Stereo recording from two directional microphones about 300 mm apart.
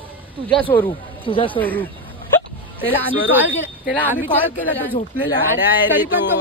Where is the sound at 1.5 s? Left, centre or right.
Centre.